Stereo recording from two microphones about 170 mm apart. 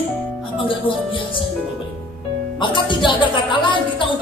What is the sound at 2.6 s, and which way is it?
Speech, 30° left (ahead or behind).